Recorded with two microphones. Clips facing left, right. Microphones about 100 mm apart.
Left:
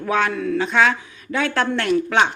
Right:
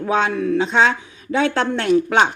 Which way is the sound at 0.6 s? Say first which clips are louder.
Even; 25° right (ahead or behind).